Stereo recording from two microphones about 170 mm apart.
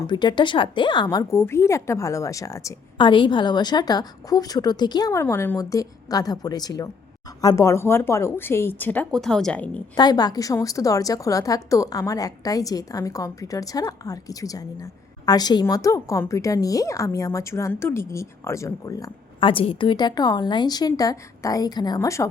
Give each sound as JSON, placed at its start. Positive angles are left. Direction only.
{"t": 0.0, "sound": "a woman's voice", "side_deg": 25}
{"t": 9.9, "sound": "a woman's voice", "side_deg": 25}